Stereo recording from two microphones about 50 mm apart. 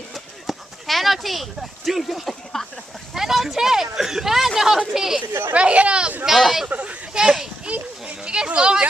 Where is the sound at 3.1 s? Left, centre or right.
Centre.